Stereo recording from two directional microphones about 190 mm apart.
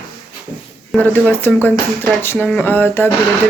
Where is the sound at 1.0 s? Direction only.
10° left (ahead or behind).